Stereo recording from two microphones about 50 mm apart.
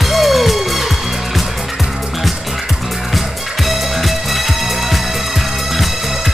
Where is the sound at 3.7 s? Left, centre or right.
Centre.